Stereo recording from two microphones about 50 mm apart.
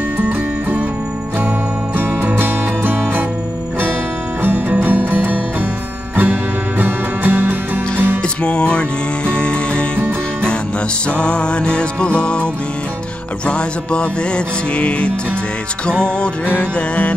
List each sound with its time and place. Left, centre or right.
0.2 s music: right
2.0 s music: right
4.4 s music: right
6.8 s music: right
8.4 s music: left
11.1 s music: left
13.5 s music: centre